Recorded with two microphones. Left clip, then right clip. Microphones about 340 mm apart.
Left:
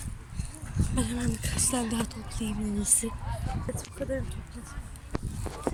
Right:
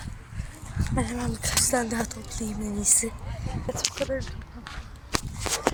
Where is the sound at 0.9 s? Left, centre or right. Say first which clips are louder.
Right 3 dB; centre.